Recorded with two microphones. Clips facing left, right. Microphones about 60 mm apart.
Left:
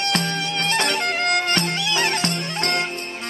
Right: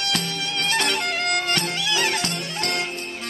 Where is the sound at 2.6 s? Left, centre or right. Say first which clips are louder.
Left 3 dB; left.